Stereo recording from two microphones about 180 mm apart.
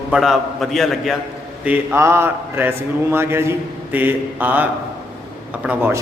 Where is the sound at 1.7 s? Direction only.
15° right (ahead or behind).